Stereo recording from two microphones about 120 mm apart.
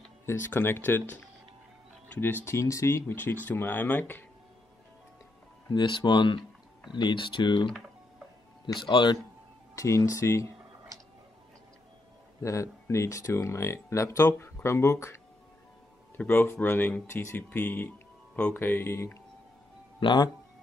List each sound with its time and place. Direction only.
0.3 s speech: 20° left (ahead or behind)
2.1 s speech: 15° left (ahead or behind)
5.7 s speech: 40° left (ahead or behind)
8.7 s speech: 40° left (ahead or behind)
9.8 s speech: 25° left (ahead or behind)
12.4 s speech: 25° left (ahead or behind)
16.3 s speech: 20° left (ahead or behind)
20.0 s speech: 40° left (ahead or behind)